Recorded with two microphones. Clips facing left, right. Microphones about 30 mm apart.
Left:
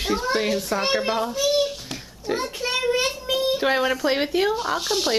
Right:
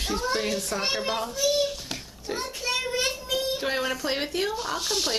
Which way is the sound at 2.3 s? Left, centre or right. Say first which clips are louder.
Left 4 dB; centre.